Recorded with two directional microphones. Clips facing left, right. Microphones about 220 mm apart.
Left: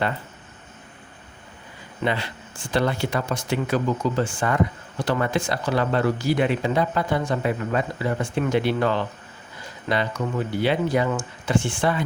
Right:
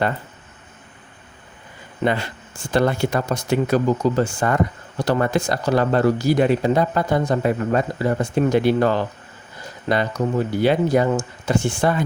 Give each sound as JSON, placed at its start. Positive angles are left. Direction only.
{"t": 2.0, "sound": "speech", "side_deg": -45}